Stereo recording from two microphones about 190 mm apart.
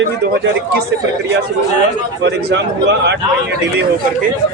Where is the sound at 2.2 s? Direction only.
60° right (ahead or behind).